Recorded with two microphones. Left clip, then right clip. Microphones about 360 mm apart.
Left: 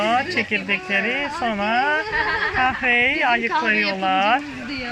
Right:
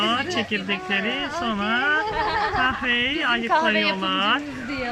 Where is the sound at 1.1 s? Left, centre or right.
Centre.